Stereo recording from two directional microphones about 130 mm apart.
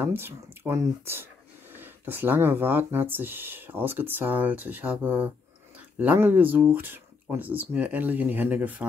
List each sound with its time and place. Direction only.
0.0 s speech: 15° right (ahead or behind)